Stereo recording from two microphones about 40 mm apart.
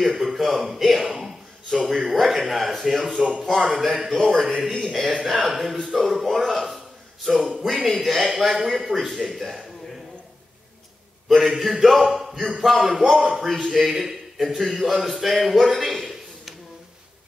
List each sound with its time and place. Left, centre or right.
0.0 s speech: centre
1.0 s a man's voice: centre
1.9 s speech: centre
11.2 s speech: centre
13.7 s a man's voice: centre